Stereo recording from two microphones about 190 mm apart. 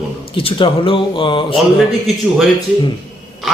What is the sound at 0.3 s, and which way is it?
Speech, 30° left (ahead or behind).